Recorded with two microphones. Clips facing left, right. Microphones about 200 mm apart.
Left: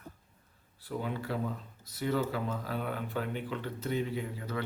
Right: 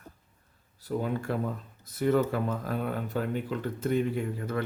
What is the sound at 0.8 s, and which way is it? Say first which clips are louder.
Speech: right 5 dB; 45° right (ahead or behind).